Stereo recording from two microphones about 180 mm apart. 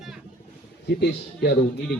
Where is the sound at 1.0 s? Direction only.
65° left (ahead or behind).